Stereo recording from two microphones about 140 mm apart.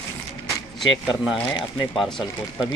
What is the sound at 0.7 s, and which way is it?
Speech, centre (ahead or behind).